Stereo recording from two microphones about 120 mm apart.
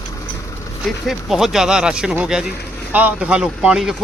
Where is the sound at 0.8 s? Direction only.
Centre (ahead or behind).